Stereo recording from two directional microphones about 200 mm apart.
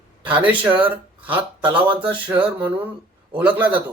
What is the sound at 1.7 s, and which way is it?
Speech, 25° right (ahead or behind).